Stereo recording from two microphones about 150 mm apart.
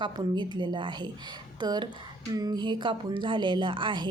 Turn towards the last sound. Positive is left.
turn(degrees=-35)  # may be behind; listen again after turning